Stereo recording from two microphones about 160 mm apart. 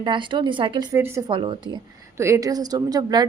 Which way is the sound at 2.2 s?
20° right (ahead or behind).